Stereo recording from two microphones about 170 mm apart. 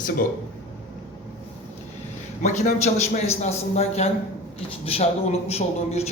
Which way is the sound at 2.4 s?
45° left (ahead or behind).